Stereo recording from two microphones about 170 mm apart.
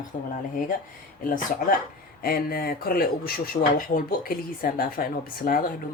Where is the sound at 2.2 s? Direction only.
60° left (ahead or behind).